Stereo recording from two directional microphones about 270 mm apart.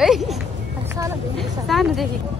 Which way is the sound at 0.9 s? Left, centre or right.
Centre.